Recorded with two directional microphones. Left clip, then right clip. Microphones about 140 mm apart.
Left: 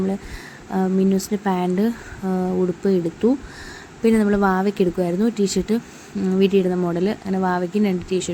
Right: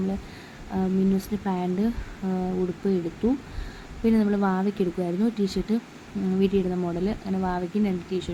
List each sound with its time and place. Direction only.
0.7 s speech: 25° left (ahead or behind)